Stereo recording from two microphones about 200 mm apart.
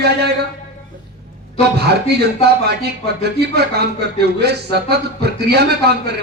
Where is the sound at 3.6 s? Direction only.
55° right (ahead or behind).